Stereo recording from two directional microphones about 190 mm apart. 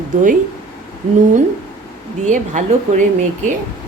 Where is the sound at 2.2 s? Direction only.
40° right (ahead or behind).